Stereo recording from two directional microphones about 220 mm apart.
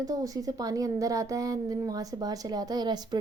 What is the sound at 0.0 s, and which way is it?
A woman's voice, 15° right (ahead or behind).